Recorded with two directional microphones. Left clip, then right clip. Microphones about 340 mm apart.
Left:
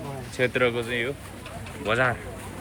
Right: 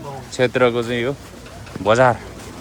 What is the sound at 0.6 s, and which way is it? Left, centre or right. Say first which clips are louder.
Speech: right 8 dB; centre.